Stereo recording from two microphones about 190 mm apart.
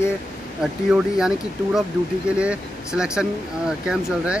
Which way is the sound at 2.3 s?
5° right (ahead or behind).